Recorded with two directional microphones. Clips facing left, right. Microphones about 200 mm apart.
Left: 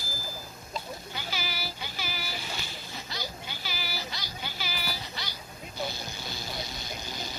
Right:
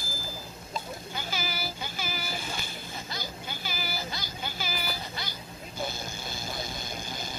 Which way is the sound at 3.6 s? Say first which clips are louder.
Right 2 dB; 50° right (ahead or behind).